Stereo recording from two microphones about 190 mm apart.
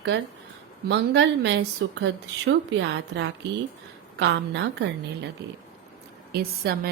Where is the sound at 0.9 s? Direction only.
65° right (ahead or behind).